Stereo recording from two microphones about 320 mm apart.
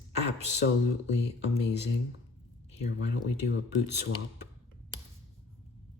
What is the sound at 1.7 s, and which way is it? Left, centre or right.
Speech, left.